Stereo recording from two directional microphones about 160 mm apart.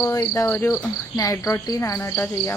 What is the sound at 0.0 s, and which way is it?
Cricket, 20° left (ahead or behind).